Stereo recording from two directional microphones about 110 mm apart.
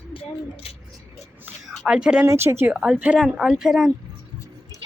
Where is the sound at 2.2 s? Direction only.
25° right (ahead or behind).